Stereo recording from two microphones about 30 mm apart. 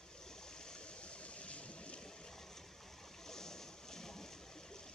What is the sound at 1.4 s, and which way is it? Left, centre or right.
Stream, left.